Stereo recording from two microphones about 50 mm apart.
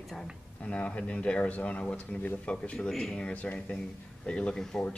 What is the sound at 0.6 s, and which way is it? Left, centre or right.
Speech, left.